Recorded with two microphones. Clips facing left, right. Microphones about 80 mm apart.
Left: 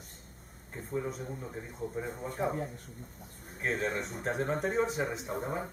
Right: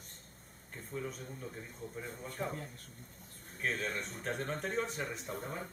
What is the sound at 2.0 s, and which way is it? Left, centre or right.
Speech, left.